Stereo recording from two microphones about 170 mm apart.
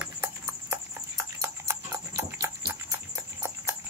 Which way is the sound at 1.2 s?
15° right (ahead or behind).